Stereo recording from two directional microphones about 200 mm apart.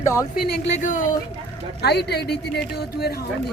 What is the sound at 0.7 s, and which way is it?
Speech, 40° left (ahead or behind).